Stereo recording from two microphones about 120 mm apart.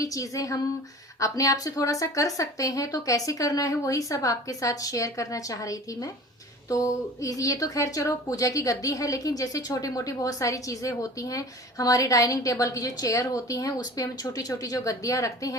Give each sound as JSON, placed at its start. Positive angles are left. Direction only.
{"t": 0.0, "sound": "a woman's voice", "side_deg": 30}